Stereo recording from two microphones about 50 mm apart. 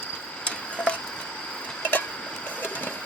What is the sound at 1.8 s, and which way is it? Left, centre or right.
Tick-tock, left.